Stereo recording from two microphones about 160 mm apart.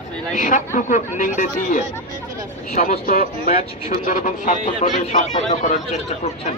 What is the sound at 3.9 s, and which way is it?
Speech, 55° left (ahead or behind).